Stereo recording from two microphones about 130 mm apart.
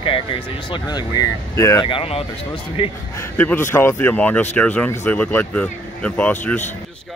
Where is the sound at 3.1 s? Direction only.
15° left (ahead or behind).